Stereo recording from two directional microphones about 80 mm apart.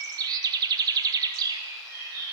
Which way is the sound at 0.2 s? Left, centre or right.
Right.